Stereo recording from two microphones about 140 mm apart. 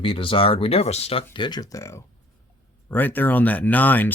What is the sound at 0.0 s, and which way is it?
Speech, 40° left (ahead or behind).